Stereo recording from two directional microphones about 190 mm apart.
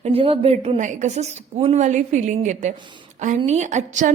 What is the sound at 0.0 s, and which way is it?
A woman's voice, 30° right (ahead or behind).